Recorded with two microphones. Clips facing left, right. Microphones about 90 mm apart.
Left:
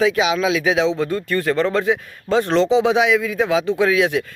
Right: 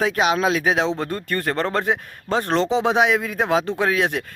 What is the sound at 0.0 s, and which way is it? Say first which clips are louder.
Speech: left 2 dB; 50° right (ahead or behind).